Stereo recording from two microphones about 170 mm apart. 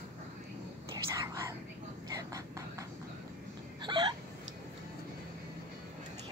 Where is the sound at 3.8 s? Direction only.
25° right (ahead or behind).